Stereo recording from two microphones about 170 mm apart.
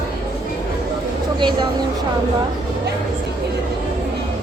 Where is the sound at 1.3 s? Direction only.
30° right (ahead or behind).